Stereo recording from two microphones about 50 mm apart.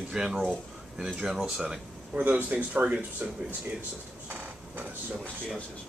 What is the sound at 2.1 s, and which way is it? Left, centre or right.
Speech, right.